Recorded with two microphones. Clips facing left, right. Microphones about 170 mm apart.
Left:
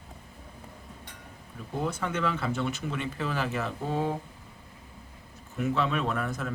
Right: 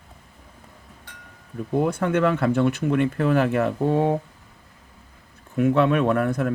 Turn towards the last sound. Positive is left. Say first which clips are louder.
# right 10 dB
turn(degrees=-55)  # may be behind; listen again after turning